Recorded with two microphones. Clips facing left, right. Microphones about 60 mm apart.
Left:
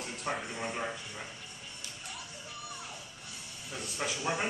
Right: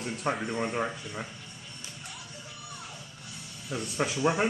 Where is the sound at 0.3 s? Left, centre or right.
Right.